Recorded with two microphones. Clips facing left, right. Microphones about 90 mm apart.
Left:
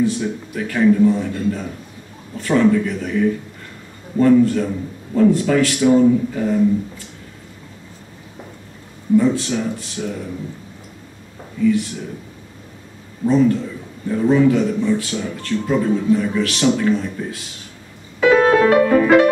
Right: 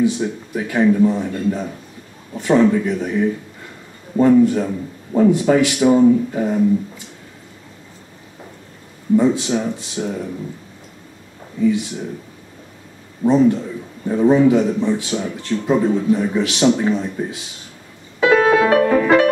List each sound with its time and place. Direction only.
0.6 s a man's voice: 20° right (ahead or behind)
9.1 s speech: 20° right (ahead or behind)
13.2 s speech: 20° right (ahead or behind)
18.2 s music: 5° right (ahead or behind)
19.0 s music: 5° left (ahead or behind)